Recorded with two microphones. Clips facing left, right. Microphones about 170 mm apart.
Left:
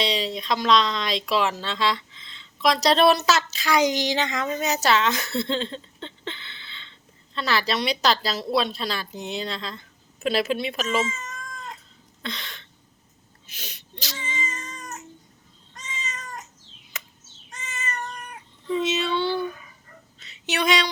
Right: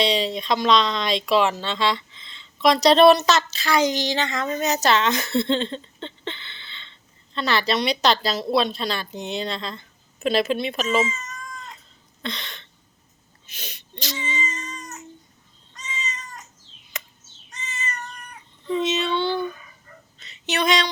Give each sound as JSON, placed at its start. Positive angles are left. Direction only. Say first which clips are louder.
{"t": 0.0, "sound": "speech", "louder": "right 4 dB", "side_deg": 0}
{"t": 12.2, "sound": "speech", "louder": "right 2 dB", "side_deg": 5}
{"t": 14.2, "sound": "cat", "louder": "right 2 dB", "side_deg": 55}
{"t": 16.9, "sound": "a sound", "louder": "right 3 dB", "side_deg": 5}
{"t": 17.5, "sound": "cat", "louder": "even", "side_deg": 50}
{"t": 18.7, "sound": "speech", "louder": "right 1 dB", "side_deg": 5}
{"t": 20.1, "sound": "a sound", "louder": "right 2 dB", "side_deg": 5}